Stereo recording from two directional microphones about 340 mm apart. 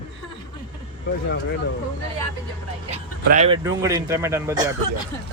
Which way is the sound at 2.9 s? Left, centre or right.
Centre.